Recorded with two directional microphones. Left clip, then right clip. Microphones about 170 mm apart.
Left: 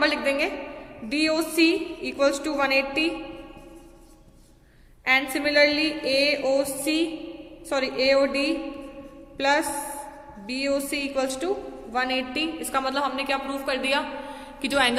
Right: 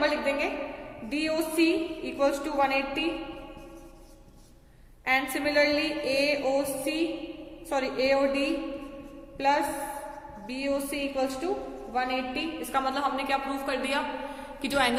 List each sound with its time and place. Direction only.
0.0 s a woman's voice: 35° left (ahead or behind)
5.0 s a woman's voice: 30° left (ahead or behind)
14.6 s a woman's voice: 15° left (ahead or behind)